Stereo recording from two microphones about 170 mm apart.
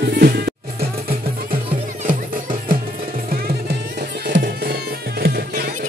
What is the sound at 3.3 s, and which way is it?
Music, 65° right (ahead or behind).